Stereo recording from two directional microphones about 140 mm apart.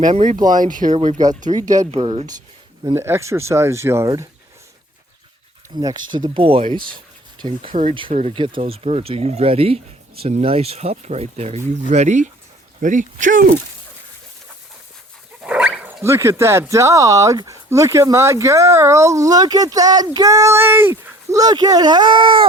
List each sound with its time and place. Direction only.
0.0 s speech: 60° right (ahead or behind)
0.5 s speech: 70° right (ahead or behind)
1.5 s speech: 25° right (ahead or behind)
1.9 s speech: 45° right (ahead or behind)
2.9 s speech: 20° right (ahead or behind)
5.7 s speech: 30° right (ahead or behind); by 13.6 s 70° right (ahead or behind)
15.4 s dog: 10° right (ahead or behind)
16.0 s speech: 20° right (ahead or behind); by 22.4 s 35° right (ahead or behind)